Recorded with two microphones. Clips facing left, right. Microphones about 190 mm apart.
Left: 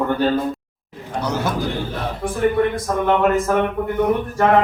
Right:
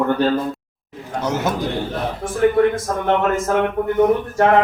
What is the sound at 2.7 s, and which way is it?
Speech, 45° right (ahead or behind).